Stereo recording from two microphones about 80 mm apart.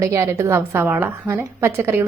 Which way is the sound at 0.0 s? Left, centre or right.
Right.